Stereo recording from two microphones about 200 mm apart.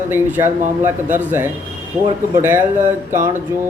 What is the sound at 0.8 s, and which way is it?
Speech, 10° right (ahead or behind).